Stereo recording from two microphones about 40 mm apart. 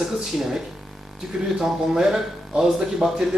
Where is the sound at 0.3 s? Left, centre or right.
Centre.